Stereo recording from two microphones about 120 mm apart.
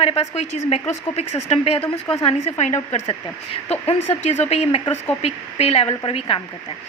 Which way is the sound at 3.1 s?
55° left (ahead or behind).